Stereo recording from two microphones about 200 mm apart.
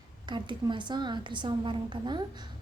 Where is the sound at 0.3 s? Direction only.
25° right (ahead or behind).